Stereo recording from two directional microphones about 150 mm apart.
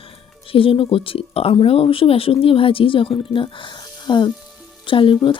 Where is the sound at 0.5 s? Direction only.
35° left (ahead or behind).